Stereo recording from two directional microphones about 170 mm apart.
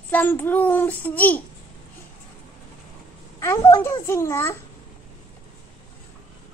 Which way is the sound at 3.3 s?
15° left (ahead or behind).